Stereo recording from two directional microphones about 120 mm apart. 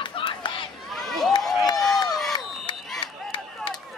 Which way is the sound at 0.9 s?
5° left (ahead or behind).